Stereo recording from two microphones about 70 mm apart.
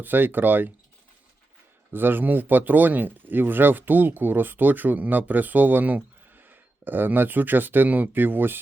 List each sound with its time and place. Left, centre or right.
0.0 s speech: right
1.9 s speech: right